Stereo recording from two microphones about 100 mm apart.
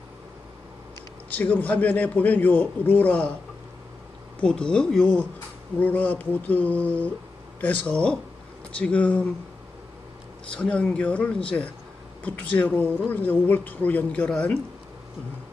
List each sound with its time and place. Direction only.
1.3 s a woman's voice: 15° left (ahead or behind)
4.4 s a woman's voice: 10° left (ahead or behind)
10.5 s a woman's voice: 10° left (ahead or behind)